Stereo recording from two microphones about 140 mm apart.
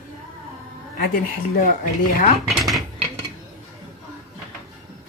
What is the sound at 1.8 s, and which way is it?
Speech, 85° left.